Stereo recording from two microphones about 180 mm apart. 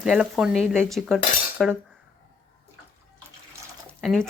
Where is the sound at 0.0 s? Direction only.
5° right (ahead or behind).